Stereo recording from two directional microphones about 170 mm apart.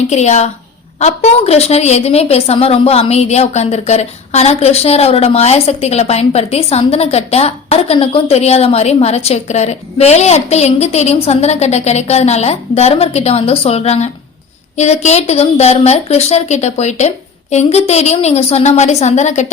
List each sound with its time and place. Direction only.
0.1 s a woman's voice: 40° left (ahead or behind)